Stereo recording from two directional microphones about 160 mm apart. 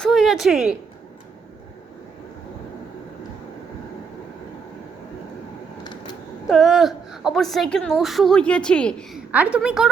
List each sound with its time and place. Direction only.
0.0 s speech: centre (ahead or behind)
5.8 s a sound: 25° left (ahead or behind)
6.5 s a woman's voice: centre (ahead or behind)
9.3 s a woman's voice: 10° right (ahead or behind)